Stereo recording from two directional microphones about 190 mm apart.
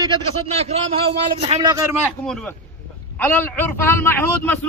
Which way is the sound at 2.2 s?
5° left (ahead or behind).